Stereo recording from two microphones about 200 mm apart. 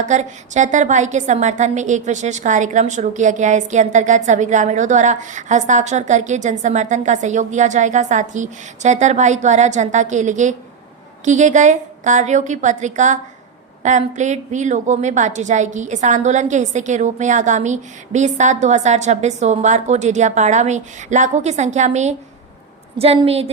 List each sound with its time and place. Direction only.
0.0 s a woman's voice: 35° right (ahead or behind)